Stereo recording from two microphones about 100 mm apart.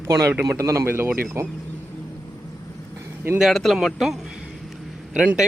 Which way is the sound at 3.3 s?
Centre (ahead or behind).